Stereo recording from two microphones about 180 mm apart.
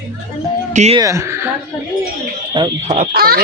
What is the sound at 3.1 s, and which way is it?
Speech, 55° right (ahead or behind).